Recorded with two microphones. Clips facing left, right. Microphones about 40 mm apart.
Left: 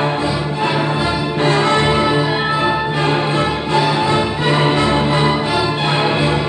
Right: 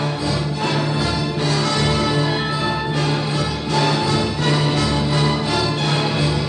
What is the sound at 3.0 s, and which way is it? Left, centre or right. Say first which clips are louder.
Music: left 5 dB; left.